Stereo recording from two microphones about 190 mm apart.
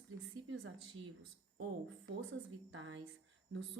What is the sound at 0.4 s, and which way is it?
Speech, 90° right.